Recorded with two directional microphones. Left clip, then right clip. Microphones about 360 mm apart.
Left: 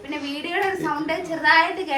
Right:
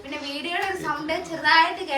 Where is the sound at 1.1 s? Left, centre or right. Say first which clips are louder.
Left 2 dB; centre.